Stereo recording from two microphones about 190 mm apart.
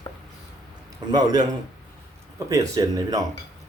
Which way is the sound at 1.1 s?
20° right (ahead or behind).